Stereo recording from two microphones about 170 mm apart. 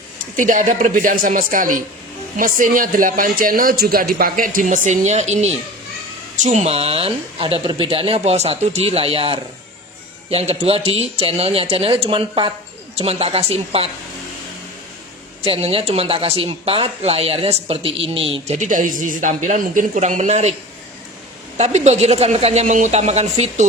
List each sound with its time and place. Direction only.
0.3 s speech: 50° right (ahead or behind)
15.4 s speech: 35° right (ahead or behind)
21.6 s speech: 40° right (ahead or behind)